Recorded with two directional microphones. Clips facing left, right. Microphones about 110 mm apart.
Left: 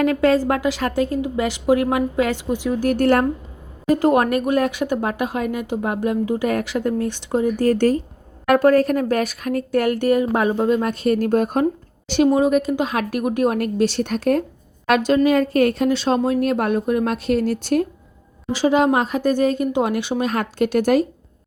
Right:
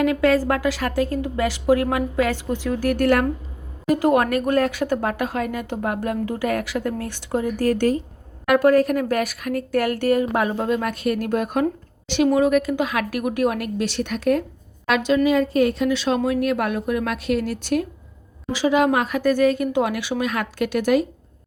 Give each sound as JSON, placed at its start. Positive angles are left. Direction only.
{"t": 0.0, "sound": "speech", "side_deg": 30}
{"t": 2.9, "sound": "a woman's voice", "side_deg": 30}
{"t": 12.4, "sound": "a woman's voice", "side_deg": 25}
{"t": 15.9, "sound": "a woman's voice", "side_deg": 35}